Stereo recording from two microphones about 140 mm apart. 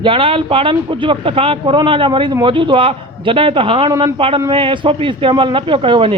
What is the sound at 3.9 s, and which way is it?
Speech, 20° right (ahead or behind).